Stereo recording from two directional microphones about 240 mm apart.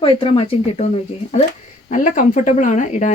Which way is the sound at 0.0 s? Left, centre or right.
Left.